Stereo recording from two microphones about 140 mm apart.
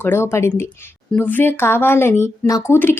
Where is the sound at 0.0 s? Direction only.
15° left (ahead or behind).